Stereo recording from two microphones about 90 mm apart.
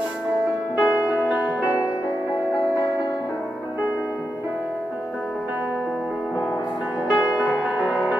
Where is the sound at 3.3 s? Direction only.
10° right (ahead or behind).